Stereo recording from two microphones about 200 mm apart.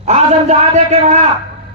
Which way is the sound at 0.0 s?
35° right (ahead or behind).